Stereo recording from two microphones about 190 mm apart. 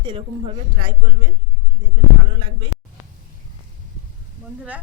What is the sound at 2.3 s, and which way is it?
Speech, 25° right (ahead or behind).